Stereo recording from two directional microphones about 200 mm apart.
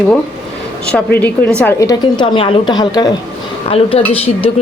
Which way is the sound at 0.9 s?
10° left (ahead or behind).